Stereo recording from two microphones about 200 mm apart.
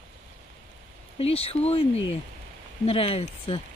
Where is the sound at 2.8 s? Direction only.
30° left (ahead or behind).